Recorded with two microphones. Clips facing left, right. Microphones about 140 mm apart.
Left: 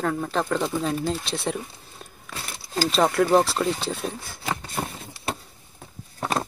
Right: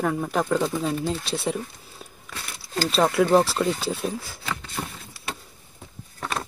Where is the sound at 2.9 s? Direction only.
Centre (ahead or behind).